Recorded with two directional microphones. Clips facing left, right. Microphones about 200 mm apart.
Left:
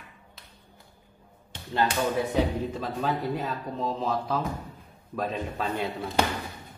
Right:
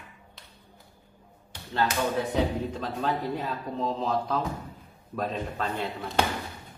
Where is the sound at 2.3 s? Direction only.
10° left (ahead or behind).